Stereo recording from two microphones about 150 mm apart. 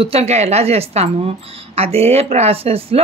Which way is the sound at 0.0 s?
45° right (ahead or behind).